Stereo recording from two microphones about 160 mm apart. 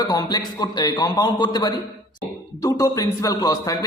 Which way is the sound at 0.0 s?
25° left (ahead or behind).